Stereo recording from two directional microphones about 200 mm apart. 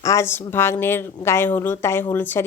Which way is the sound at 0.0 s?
15° left (ahead or behind).